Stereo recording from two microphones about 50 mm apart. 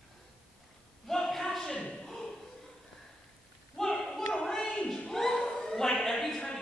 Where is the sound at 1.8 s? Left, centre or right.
Left.